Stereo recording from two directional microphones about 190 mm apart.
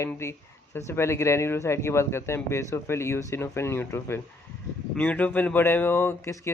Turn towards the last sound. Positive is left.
turn(degrees=15)  # may be behind; listen again after turning